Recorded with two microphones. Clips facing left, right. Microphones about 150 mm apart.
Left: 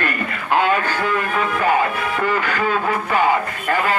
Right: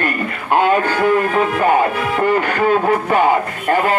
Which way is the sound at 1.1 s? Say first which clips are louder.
Right 5 dB; 40° right (ahead or behind).